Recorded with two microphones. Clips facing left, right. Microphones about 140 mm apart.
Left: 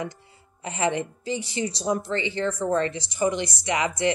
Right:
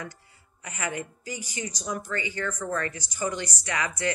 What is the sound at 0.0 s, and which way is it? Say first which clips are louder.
A woman's voice: left 7 dB; 25° left (ahead or behind).